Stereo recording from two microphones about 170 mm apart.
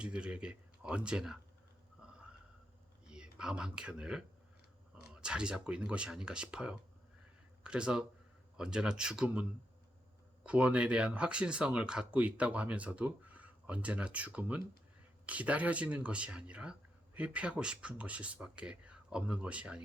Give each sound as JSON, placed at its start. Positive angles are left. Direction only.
{"t": 0.0, "sound": "speech", "side_deg": -5}
{"t": 2.0, "sound": "a sound", "side_deg": -5}
{"t": 3.1, "sound": "speech", "side_deg": -5}